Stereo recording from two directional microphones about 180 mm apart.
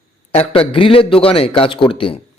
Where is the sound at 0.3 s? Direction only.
30° left (ahead or behind).